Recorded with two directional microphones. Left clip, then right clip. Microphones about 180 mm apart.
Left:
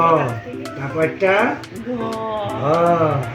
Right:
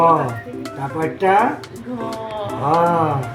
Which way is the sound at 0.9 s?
Centre (ahead or behind).